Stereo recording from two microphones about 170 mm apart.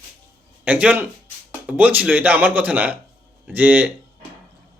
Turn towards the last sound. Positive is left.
turn(degrees=-10)  # may be behind; listen again after turning